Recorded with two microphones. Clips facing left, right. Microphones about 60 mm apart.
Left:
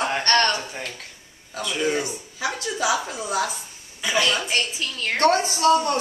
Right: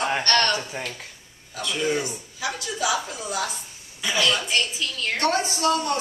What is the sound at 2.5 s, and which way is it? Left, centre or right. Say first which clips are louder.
Speech: left 2 dB; left.